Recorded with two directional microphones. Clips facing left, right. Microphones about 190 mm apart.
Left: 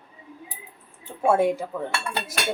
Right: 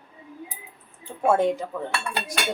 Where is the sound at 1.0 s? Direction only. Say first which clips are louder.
Even; 10° left (ahead or behind).